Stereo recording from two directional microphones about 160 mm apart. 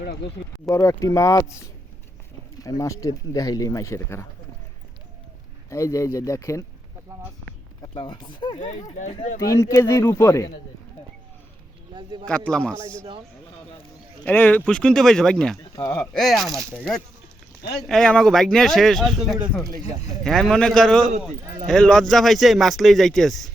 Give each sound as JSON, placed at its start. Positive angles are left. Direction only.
{"t": 0.0, "sound": "speech", "side_deg": 90}
{"t": 0.6, "sound": "speech", "side_deg": 20}
{"t": 5.7, "sound": "speech", "side_deg": 20}
{"t": 7.8, "sound": "speech", "side_deg": 25}
{"t": 8.5, "sound": "speech", "side_deg": 45}
{"t": 9.4, "sound": "speech", "side_deg": 20}
{"t": 12.2, "sound": "speech", "side_deg": 5}
{"t": 14.3, "sound": "speech", "side_deg": 10}
{"t": 15.8, "sound": "speech", "side_deg": 15}
{"t": 16.1, "sound": "speech", "side_deg": 0}
{"t": 17.8, "sound": "speech", "side_deg": 5}